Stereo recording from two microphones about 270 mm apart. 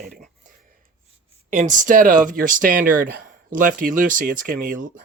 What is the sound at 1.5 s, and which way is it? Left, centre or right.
Speech, right.